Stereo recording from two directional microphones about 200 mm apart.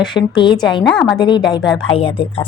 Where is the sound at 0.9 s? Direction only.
5° left (ahead or behind).